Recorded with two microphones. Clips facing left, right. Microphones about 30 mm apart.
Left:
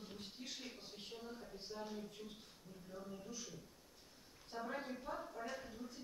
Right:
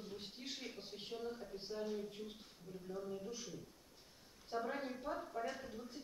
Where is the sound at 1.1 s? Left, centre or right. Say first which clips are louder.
Right 7 dB; centre.